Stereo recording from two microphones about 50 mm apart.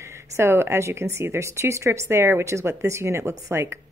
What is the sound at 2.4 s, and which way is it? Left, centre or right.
A woman's voice, right.